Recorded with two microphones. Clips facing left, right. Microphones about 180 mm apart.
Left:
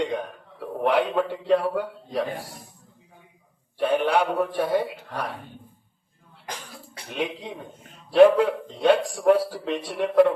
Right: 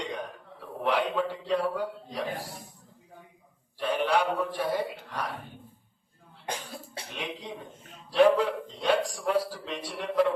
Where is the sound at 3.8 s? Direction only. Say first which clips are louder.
Left 5 dB; 55° left (ahead or behind).